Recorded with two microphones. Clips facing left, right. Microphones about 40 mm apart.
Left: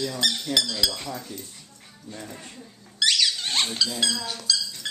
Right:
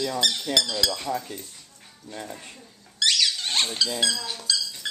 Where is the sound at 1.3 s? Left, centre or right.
Right.